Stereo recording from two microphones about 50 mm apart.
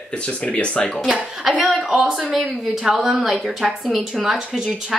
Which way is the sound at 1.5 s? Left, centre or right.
Centre.